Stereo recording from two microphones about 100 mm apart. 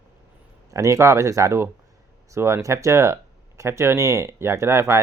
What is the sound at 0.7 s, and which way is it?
Speech, 30° right (ahead or behind).